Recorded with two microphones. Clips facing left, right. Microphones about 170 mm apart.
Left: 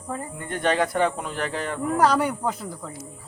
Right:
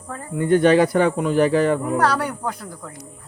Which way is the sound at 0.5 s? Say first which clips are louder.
Right 8 dB; 80° right.